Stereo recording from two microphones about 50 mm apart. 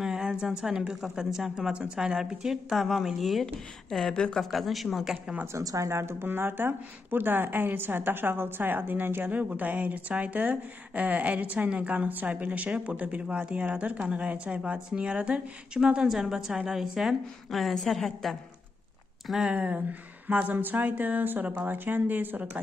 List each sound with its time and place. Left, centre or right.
0.0 s a sound: centre
0.3 s a woman's voice: centre
4.1 s speech: centre
4.4 s speech: centre
5.5 s speech: right
6.2 s a woman's voice: right
9.3 s a woman's voice: right; by 17.1 s centre
17.5 s speech: centre
19.4 s a woman's voice: right